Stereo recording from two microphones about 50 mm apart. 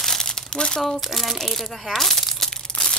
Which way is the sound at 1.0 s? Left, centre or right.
Centre.